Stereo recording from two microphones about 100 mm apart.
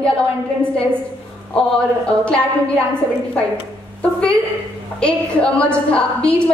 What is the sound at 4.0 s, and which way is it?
A woman's voice, 10° left (ahead or behind).